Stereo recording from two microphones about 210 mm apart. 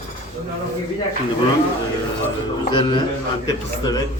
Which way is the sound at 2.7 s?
20° left (ahead or behind).